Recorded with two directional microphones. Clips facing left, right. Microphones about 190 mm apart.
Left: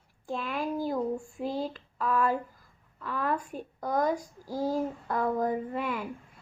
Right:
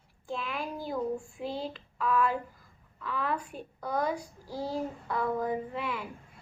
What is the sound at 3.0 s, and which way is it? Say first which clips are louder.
A child's voice: left 2 dB; 45° left (ahead or behind).